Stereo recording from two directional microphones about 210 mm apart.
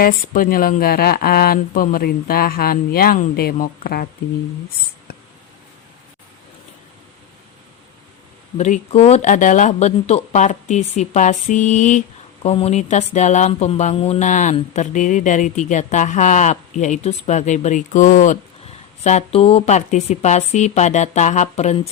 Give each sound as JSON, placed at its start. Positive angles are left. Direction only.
{"t": 0.0, "sound": "speech", "side_deg": 45}
{"t": 8.5, "sound": "speech", "side_deg": 35}